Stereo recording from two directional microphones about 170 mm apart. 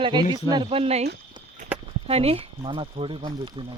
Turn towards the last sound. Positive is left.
turn(degrees=-30)  # may be behind; listen again after turning